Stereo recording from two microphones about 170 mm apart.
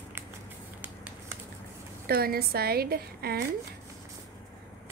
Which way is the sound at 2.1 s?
65° right (ahead or behind).